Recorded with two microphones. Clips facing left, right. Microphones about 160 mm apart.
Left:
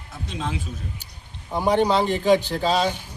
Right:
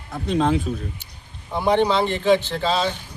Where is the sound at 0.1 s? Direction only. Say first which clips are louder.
Right 10 dB; 55° right (ahead or behind).